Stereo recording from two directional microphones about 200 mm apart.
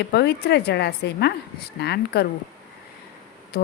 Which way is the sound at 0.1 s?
55° left (ahead or behind).